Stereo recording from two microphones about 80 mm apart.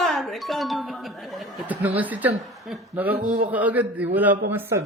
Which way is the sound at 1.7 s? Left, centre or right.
Right.